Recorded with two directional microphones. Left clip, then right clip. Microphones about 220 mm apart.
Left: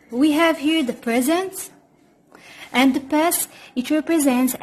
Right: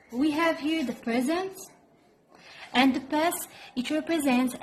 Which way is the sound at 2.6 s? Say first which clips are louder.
Left 5 dB; 25° left (ahead or behind).